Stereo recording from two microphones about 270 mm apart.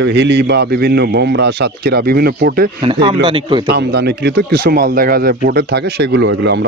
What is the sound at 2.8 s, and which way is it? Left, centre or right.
Speech, centre.